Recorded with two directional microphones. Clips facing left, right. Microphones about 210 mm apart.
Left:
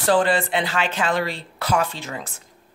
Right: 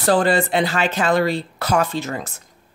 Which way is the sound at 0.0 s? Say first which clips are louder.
Right 2 dB; 40° right (ahead or behind).